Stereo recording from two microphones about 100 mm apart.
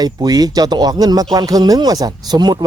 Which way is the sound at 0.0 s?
40° right (ahead or behind).